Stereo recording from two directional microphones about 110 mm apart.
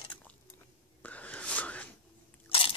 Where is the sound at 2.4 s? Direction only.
55° left (ahead or behind).